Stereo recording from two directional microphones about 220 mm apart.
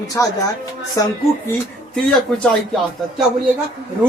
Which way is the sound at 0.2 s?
10° left (ahead or behind).